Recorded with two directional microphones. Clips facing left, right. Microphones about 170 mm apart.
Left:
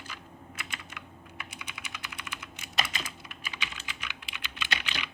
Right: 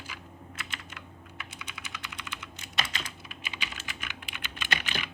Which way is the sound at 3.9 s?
50° right (ahead or behind).